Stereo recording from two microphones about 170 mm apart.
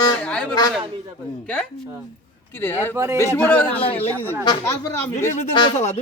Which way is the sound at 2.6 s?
10° left (ahead or behind).